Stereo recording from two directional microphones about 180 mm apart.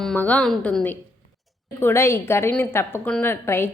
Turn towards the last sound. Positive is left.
turn(degrees=15)  # may be behind; listen again after turning